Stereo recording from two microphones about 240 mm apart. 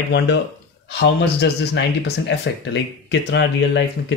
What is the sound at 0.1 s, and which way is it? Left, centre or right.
Speech, left.